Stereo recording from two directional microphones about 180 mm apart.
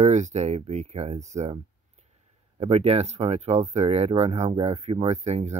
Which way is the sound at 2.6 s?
35° right (ahead or behind).